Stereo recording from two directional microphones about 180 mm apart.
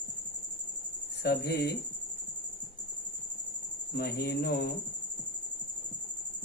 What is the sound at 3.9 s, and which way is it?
Speech, 60° left (ahead or behind).